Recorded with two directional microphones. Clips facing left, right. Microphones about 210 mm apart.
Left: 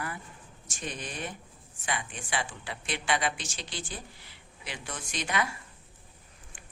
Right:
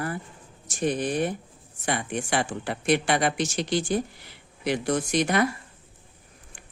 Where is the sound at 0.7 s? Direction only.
55° right (ahead or behind).